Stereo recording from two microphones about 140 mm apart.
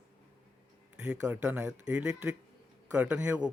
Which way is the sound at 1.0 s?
10° right (ahead or behind).